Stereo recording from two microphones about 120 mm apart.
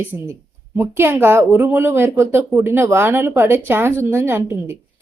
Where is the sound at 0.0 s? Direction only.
15° right (ahead or behind).